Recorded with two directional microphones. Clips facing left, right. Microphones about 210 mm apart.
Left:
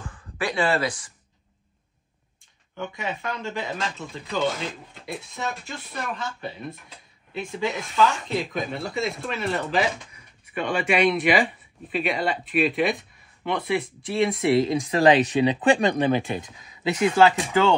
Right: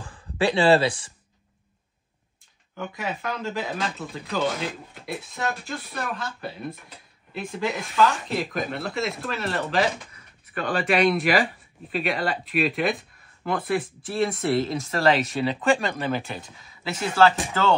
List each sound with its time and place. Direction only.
0.0 s speech: 30° right (ahead or behind)
2.7 s speech: centre (ahead or behind)
14.9 s speech: 15° left (ahead or behind)